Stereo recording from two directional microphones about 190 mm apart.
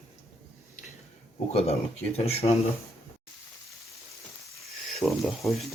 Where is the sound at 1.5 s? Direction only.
35° left (ahead or behind).